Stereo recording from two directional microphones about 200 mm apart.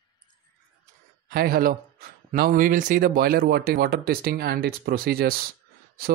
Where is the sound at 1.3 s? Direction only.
50° right (ahead or behind).